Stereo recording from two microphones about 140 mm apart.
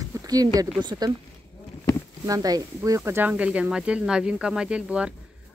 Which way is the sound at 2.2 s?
25° right (ahead or behind).